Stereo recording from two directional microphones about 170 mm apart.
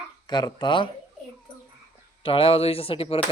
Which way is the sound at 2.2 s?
35° left (ahead or behind).